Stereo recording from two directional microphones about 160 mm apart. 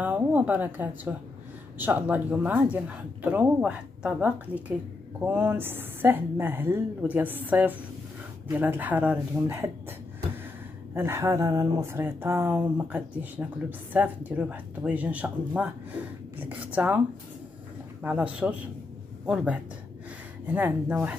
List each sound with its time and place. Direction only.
0.0 s speech: 10° right (ahead or behind)
11.0 s speech: 15° right (ahead or behind)
18.0 s speech: 10° right (ahead or behind)